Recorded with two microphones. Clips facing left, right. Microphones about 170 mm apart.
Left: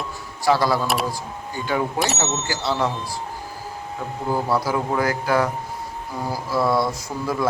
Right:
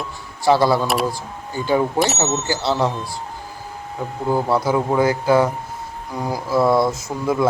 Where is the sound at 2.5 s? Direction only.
30° right (ahead or behind).